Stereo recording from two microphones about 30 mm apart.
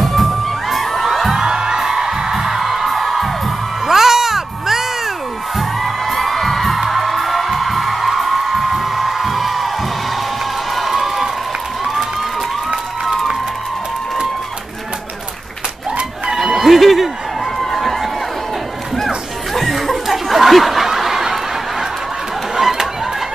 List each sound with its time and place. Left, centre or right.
0.0 s music: centre
1.3 s music: centre
2.6 s music: centre
3.8 s a sound: centre
5.6 s music: centre
10.8 s crowd: centre
16.5 s a sound: centre
18.9 s music: centre
19.7 s snicker: centre
22.6 s a sound: centre